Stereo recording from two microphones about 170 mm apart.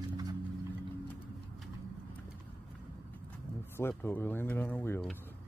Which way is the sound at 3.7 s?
15° left (ahead or behind).